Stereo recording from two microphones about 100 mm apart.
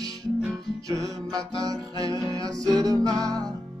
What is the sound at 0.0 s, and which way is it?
Music, 40° right (ahead or behind).